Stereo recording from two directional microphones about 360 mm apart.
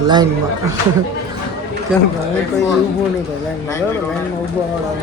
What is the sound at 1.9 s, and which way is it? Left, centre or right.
Speech, centre.